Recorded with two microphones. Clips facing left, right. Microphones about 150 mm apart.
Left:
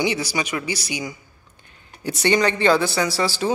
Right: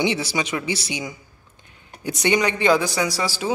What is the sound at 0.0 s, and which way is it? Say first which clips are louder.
Speech: even; 25° right (ahead or behind).